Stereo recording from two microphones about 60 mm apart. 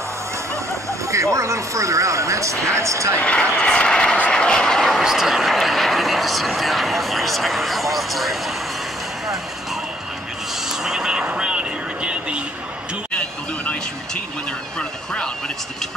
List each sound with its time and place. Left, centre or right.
1.0 s speech: right
3.2 s speech: centre
5.0 s speech: centre
10.7 s a sound: centre
13.1 s vehicle: centre
14.8 s a sound: centre